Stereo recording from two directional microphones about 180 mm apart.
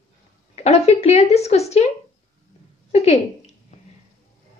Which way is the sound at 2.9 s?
35° left (ahead or behind).